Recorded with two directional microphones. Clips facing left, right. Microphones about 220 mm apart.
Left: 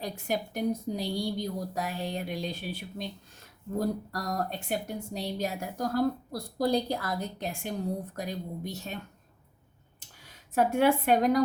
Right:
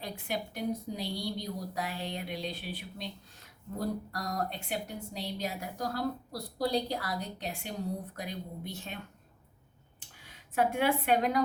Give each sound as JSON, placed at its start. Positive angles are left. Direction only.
{"t": 0.0, "sound": "speech", "side_deg": 45}
{"t": 10.2, "sound": "a woman's voice", "side_deg": 40}